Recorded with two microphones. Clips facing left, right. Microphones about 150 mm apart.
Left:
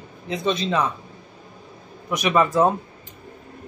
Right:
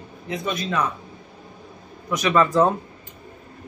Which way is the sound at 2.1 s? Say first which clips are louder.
Even; 10° left (ahead or behind).